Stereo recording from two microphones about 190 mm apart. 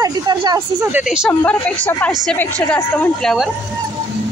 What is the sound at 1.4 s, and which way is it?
A woman's voice, 5° left (ahead or behind).